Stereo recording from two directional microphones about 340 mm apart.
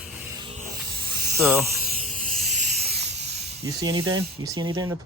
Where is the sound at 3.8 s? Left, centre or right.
Centre.